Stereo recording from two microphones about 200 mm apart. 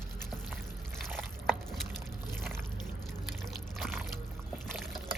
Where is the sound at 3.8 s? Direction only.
Centre (ahead or behind).